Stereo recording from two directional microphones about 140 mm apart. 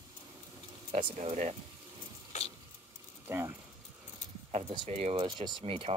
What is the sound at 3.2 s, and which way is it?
Speech, 15° right (ahead or behind).